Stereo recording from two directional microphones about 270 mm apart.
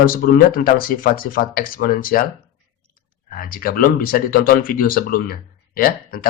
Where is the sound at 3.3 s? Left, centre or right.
Left.